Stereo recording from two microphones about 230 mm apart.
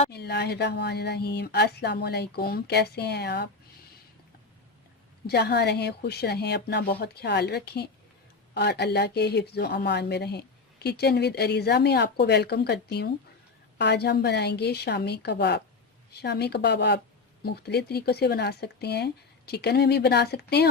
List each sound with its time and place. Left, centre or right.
0.1 s speech: left
5.2 s speech: left